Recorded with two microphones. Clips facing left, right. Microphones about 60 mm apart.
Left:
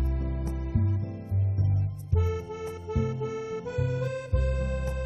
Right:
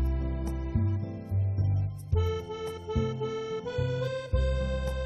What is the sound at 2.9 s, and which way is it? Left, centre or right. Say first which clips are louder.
Accordion: left 1 dB; left.